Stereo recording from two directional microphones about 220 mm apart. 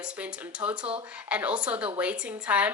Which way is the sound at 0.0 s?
5° right (ahead or behind).